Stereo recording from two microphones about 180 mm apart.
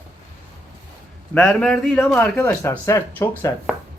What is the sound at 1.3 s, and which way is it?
A man's voice, 10° left (ahead or behind).